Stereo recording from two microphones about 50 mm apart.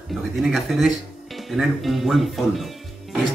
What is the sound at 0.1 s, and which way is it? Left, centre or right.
Speech, centre.